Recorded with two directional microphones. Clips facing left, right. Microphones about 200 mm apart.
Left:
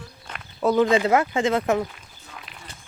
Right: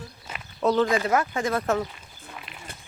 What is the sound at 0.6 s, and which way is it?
Speech, 10° left (ahead or behind).